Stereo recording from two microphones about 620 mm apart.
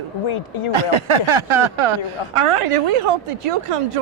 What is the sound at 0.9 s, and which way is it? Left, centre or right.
A woman's voice, right.